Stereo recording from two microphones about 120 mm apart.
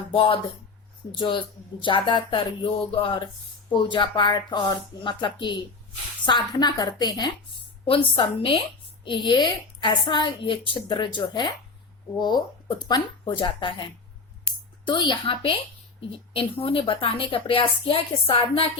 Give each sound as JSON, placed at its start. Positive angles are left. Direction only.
{"t": 0.1, "sound": "speech", "side_deg": 50}
{"t": 1.8, "sound": "a woman's voice", "side_deg": 45}
{"t": 7.9, "sound": "a woman's voice", "side_deg": 45}
{"t": 14.8, "sound": "a woman's voice", "side_deg": 40}